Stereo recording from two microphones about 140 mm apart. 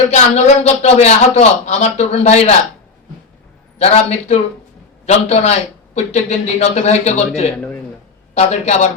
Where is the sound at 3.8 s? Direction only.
50° left (ahead or behind).